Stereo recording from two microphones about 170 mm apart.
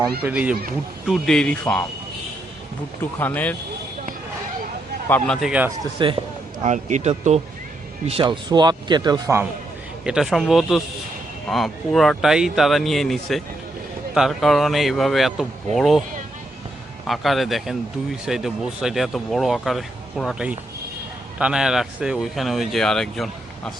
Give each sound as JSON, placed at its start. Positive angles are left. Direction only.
{"t": 0.2, "sound": "speech", "side_deg": -10}
{"t": 3.0, "sound": "speech", "side_deg": 10}
{"t": 5.0, "sound": "speech", "side_deg": 10}
{"t": 5.5, "sound": "speech", "side_deg": -10}
{"t": 6.0, "sound": "a man's voice", "side_deg": -30}
{"t": 6.6, "sound": "a man's voice", "side_deg": -45}
{"t": 10.0, "sound": "speech", "side_deg": -5}
{"t": 17.1, "sound": "speech", "side_deg": 0}